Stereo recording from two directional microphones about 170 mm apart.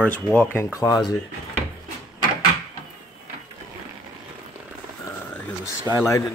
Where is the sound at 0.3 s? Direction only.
10° left (ahead or behind).